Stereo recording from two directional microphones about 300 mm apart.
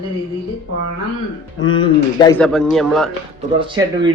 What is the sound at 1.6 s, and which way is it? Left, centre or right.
Speech, left.